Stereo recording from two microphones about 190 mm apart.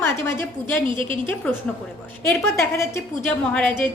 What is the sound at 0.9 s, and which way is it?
Speech, 25° right (ahead or behind).